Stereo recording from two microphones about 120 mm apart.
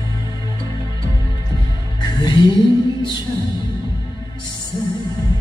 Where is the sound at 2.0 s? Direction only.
40° left (ahead or behind).